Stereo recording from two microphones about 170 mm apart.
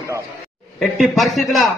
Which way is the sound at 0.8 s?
Centre (ahead or behind).